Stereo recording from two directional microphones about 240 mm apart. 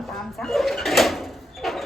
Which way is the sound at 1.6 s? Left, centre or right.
Centre.